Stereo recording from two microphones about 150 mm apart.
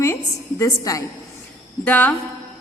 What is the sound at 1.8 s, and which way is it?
Speech, 10° left (ahead or behind).